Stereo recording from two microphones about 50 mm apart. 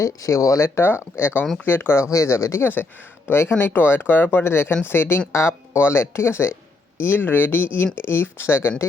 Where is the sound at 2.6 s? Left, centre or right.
Left.